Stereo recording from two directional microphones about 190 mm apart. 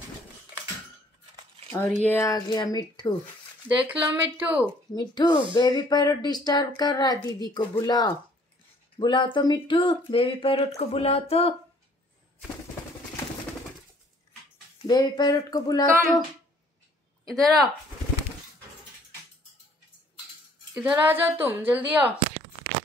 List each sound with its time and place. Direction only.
1.7 s speech: 10° left (ahead or behind)
3.6 s a woman's voice: 10° right (ahead or behind)
4.9 s speech: 25° left (ahead or behind)
14.9 s speech: 20° left (ahead or behind)
17.3 s speech: centre (ahead or behind)
20.7 s a woman's voice: 10° right (ahead or behind)